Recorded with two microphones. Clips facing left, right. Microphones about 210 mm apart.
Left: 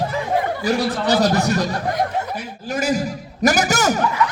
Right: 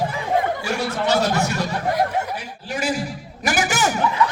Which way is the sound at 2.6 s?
40° left (ahead or behind).